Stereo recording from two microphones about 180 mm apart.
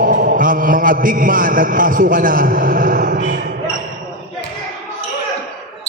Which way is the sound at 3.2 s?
70° right (ahead or behind).